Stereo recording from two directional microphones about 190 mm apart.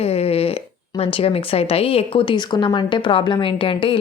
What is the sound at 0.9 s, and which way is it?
Speech, 30° left (ahead or behind).